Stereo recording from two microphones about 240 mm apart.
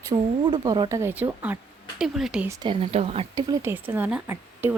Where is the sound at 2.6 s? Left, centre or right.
Right.